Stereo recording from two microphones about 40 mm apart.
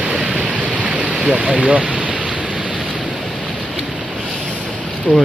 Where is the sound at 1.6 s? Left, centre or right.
Right.